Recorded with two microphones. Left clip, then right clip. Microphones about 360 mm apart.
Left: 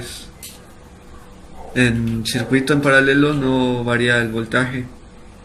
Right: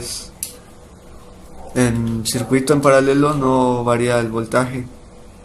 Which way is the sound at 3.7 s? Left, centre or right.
Right.